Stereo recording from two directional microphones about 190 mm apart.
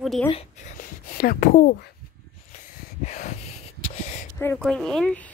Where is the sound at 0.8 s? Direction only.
50° left (ahead or behind).